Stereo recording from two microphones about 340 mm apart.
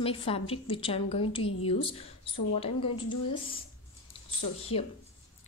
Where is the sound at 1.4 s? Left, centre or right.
Left.